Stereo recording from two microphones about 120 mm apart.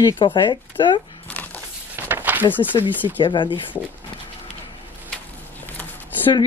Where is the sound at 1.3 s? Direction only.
15° left (ahead or behind).